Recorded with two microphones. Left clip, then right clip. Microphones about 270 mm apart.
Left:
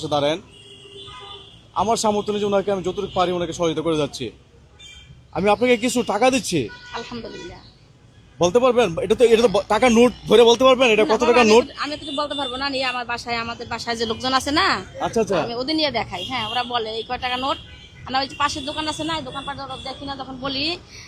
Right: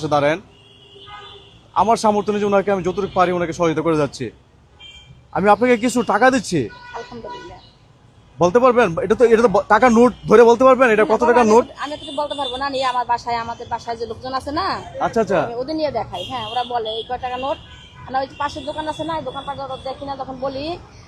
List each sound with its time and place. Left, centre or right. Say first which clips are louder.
0.1 s a man's voice: right 4 dB; centre
1.7 s a man's voice: right 4 dB; centre
5.3 s speech: right 3 dB; centre
8.4 s speech: right 3 dB; centre
11.8 s speech: right 1 dB; left
13.8 s speech: left 1 dB; left
14.2 s speech: left 5 dB; left
14.9 s speech: right 3 dB; centre
15.5 s a man's voice: even; left
18.1 s a man's voice: left 1 dB; left